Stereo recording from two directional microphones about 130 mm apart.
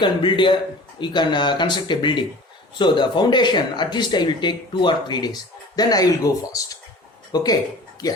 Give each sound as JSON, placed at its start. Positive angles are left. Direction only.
{"t": 0.0, "sound": "speech", "side_deg": 35}